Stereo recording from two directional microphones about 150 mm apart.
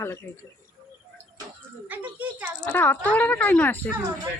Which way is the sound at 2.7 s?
10° left (ahead or behind).